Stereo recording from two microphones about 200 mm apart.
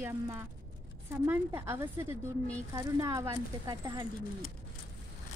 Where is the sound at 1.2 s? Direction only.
10° right (ahead or behind).